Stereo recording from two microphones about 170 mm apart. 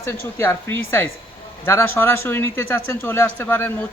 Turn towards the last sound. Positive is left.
turn(degrees=10)  # may be behind; listen again after turning